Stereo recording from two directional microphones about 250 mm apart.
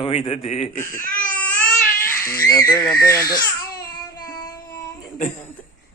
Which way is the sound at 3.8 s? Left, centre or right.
Centre.